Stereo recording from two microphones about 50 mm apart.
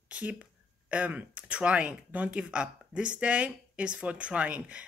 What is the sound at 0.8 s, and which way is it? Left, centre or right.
A woman's voice, right.